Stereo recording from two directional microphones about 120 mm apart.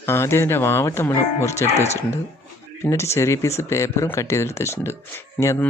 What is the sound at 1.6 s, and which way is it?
Speech, 65° left (ahead or behind).